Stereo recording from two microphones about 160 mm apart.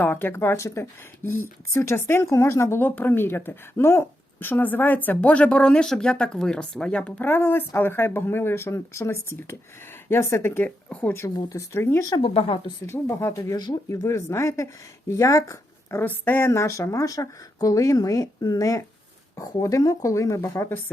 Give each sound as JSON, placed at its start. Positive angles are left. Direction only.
{"t": 0.0, "sound": "speech", "side_deg": 10}
{"t": 12.2, "sound": "speech", "side_deg": 35}
{"t": 12.8, "sound": "speech", "side_deg": 15}